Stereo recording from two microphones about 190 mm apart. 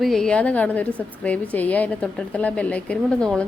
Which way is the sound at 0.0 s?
Centre (ahead or behind).